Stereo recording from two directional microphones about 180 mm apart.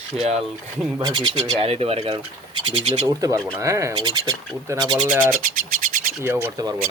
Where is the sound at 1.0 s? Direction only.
25° right (ahead or behind).